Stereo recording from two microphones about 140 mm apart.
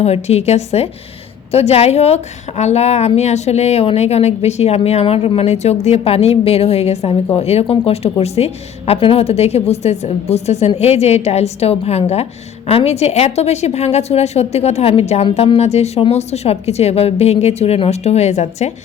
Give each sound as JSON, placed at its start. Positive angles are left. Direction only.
{"t": 0.0, "sound": "a woman's voice", "side_deg": 50}